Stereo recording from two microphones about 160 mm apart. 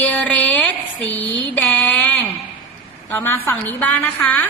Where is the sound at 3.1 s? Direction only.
15° left (ahead or behind).